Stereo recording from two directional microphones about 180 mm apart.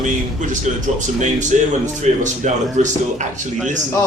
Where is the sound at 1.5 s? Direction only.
40° right (ahead or behind).